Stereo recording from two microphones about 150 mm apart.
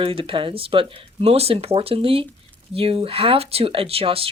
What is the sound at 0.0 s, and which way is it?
Speech, 35° right (ahead or behind).